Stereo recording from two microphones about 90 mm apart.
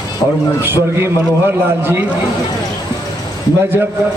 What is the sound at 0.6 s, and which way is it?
Speech, 25° right (ahead or behind).